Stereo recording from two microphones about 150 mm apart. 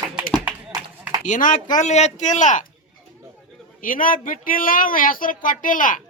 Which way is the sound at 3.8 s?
65° left (ahead or behind).